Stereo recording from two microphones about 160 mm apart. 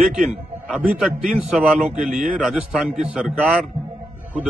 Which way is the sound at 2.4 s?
Centre (ahead or behind).